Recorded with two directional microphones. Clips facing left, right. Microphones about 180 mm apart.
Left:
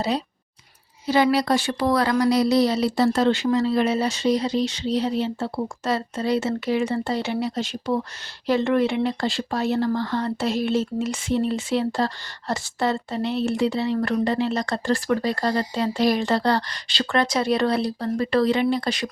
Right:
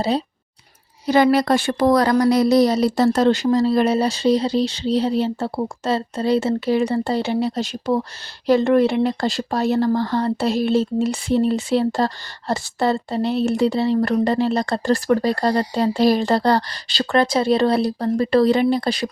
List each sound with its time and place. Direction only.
1.0 s speech: 50° right (ahead or behind)